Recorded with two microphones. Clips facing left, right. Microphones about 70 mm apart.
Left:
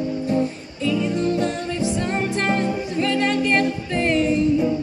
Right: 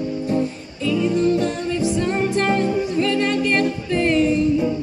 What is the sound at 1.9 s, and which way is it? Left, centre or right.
Music, left.